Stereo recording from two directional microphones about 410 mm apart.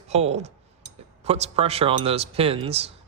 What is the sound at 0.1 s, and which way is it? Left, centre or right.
A man's voice, centre.